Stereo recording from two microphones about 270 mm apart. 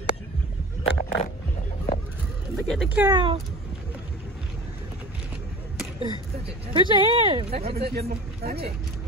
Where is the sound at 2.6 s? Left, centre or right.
Centre.